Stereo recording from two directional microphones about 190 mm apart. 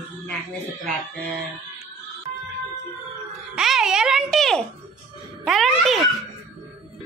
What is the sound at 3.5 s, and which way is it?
A child's voice, centre (ahead or behind).